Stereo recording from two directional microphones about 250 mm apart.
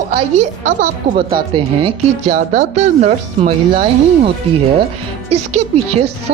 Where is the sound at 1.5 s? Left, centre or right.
Right.